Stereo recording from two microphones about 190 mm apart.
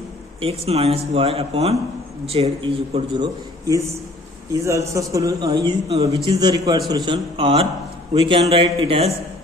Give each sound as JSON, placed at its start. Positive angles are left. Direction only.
{"t": 0.4, "sound": "a man's voice", "side_deg": -30}